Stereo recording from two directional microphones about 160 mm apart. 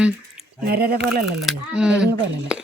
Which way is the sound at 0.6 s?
80° right.